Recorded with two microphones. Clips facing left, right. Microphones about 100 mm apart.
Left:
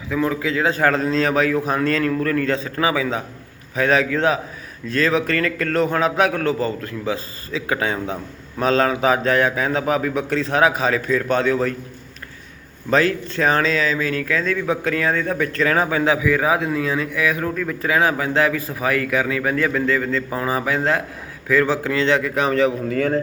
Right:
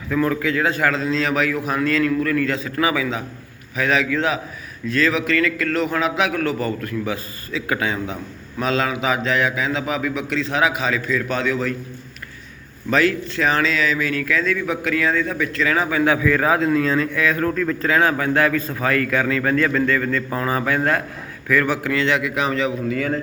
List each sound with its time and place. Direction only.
0.1 s a man's voice: 15° left (ahead or behind); by 11.7 s 35° left (ahead or behind)
12.9 s a man's voice: 35° left (ahead or behind)
16.1 s a man's voice: 10° left (ahead or behind); by 23.2 s 40° left (ahead or behind)